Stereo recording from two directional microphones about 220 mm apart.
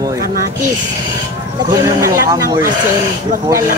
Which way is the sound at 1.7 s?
15° right (ahead or behind).